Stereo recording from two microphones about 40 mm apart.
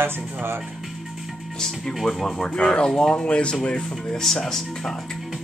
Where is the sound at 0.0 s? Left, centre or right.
Right.